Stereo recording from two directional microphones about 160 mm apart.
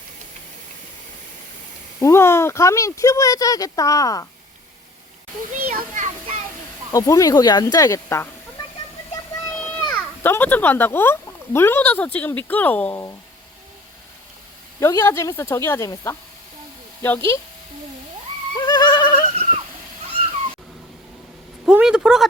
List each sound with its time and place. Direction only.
2.0 s speech: 15° left (ahead or behind)
5.7 s a sound: 55° right (ahead or behind)
6.9 s speech: 20° left (ahead or behind)
9.4 s a sound: 10° left (ahead or behind)
9.9 s speech: 10° left (ahead or behind)
14.8 s speech: 20° left (ahead or behind)
18.5 s goat: 25° left (ahead or behind)
21.7 s speech: 5° right (ahead or behind)